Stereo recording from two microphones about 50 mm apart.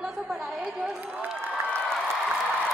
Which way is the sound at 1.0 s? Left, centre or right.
Right.